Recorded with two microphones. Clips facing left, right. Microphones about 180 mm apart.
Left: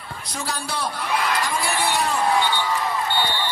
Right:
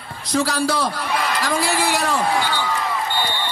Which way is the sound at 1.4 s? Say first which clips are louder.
Right 3 dB; 90° right.